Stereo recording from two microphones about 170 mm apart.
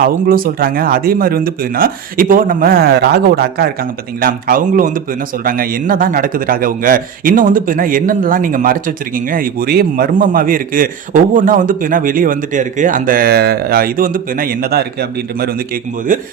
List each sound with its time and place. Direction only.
0.0 s a man's voice: 55° right (ahead or behind)
4.2 s a man's voice: 55° right (ahead or behind)